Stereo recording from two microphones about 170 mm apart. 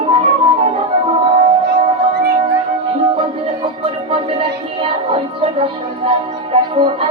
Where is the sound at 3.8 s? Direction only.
35° right (ahead or behind).